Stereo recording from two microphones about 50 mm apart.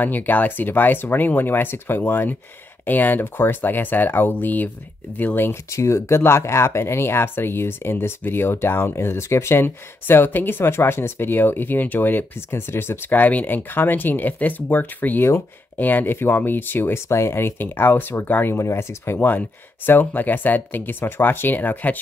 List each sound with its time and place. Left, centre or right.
0.0 s speech: left
5.7 s speech: left
12.4 s speech: left
13.1 s speech: left
16.9 s speech: left
18.6 s speech: left
19.1 s speech: left